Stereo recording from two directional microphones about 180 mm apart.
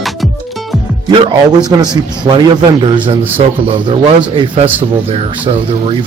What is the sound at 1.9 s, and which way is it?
Speech, 25° right (ahead or behind).